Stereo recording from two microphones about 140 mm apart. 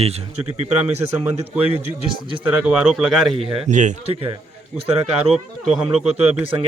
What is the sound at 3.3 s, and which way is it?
Speech, 40° right (ahead or behind).